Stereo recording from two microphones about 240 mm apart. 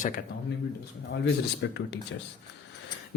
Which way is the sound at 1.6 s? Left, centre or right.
Left.